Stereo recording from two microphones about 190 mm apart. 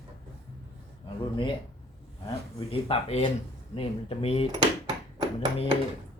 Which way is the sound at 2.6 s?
30° left (ahead or behind).